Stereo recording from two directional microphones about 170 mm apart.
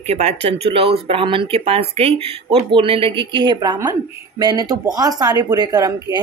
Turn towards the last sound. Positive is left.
turn(degrees=-20)  # may be behind; listen again after turning